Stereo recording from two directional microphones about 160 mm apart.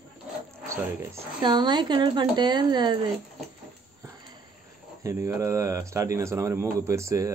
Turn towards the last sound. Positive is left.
turn(degrees=-20)  # may be behind; listen again after turning